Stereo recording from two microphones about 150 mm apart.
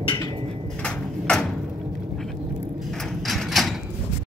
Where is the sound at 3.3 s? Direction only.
Centre (ahead or behind).